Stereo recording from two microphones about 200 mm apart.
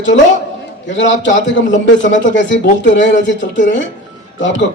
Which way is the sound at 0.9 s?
65° left (ahead or behind).